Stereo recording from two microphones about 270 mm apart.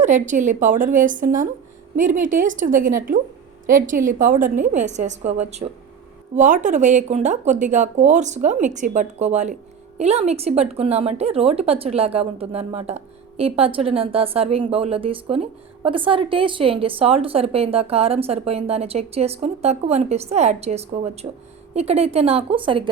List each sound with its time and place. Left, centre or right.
0.0 s a woman's voice: right